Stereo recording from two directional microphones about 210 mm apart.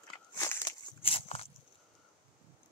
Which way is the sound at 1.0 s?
30° left (ahead or behind).